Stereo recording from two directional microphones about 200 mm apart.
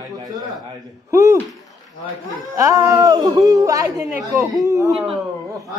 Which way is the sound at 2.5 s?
15° right (ahead or behind).